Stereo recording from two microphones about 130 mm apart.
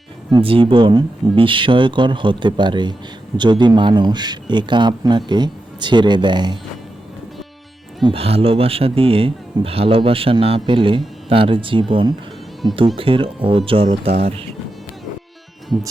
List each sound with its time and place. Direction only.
0.3 s speech: 40° right (ahead or behind)
8.0 s speech: 45° right (ahead or behind); by 12.8 s 30° right (ahead or behind)
13.0 s speech: 45° right (ahead or behind)